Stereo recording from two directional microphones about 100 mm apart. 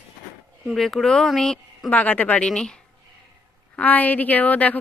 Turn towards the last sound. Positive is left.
turn(degrees=15)  # may be behind; listen again after turning